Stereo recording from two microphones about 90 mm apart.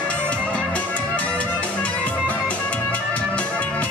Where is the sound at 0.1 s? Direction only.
15° left (ahead or behind).